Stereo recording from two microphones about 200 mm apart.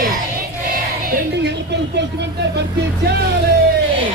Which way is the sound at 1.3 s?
60° right (ahead or behind).